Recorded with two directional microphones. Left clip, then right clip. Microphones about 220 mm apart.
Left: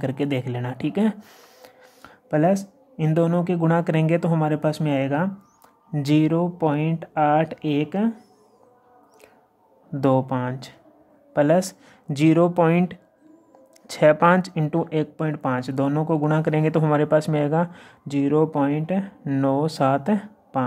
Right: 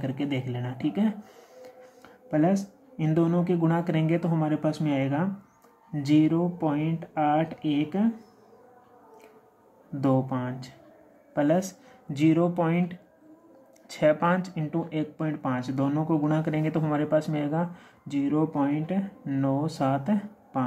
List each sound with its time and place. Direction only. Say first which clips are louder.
0.0 s speech: left 6 dB; 50° left (ahead or behind)
9.9 s speech: left 6 dB; 45° left (ahead or behind)